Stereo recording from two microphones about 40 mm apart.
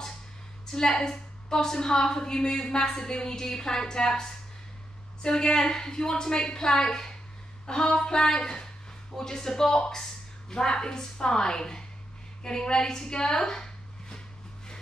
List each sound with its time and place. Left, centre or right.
0.7 s a woman's voice: centre